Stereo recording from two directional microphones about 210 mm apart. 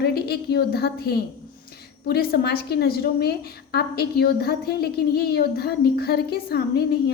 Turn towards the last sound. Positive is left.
turn(degrees=50)  # may be behind; listen again after turning